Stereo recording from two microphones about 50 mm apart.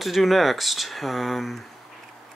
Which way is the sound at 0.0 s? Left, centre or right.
Centre.